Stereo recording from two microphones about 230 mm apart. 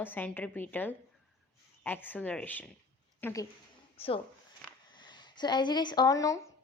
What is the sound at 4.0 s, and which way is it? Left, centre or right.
A woman's voice, left.